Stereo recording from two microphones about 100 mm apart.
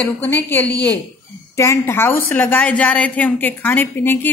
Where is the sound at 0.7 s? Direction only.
40° right (ahead or behind).